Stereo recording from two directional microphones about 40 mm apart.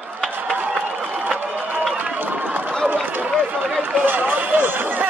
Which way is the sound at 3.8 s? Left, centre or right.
Right.